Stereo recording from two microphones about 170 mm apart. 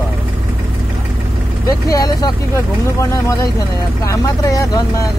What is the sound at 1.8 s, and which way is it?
Speech, 20° left (ahead or behind).